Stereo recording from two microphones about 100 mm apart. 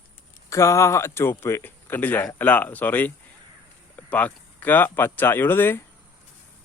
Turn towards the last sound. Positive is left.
turn(degrees=20)  # may be behind; listen again after turning